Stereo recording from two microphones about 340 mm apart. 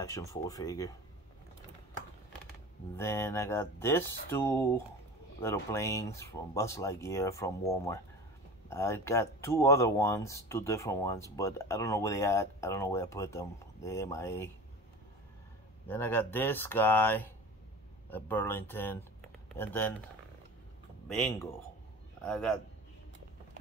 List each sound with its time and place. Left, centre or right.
0.0 s speech: centre
3.0 s speech: centre
15.9 s speech: centre
22.2 s speech: centre